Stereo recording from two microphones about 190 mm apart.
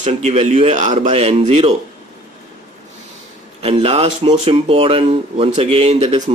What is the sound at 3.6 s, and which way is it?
Speech, 30° right (ahead or behind).